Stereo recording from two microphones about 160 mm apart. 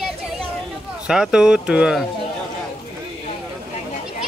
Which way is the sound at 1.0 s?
5° right (ahead or behind).